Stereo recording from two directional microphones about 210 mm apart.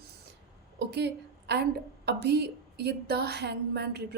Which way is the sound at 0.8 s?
55° right (ahead or behind).